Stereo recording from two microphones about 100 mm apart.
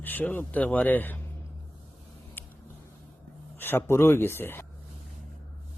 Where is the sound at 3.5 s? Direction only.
20° left (ahead or behind).